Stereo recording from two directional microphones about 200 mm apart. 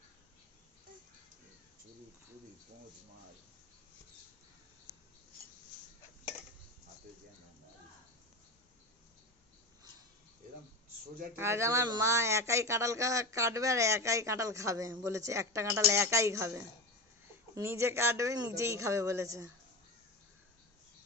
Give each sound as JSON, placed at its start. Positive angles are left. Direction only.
{"t": 11.3, "sound": "speech", "side_deg": -15}